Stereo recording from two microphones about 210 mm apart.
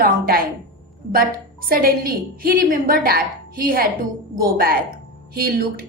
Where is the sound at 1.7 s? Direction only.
45° right (ahead or behind).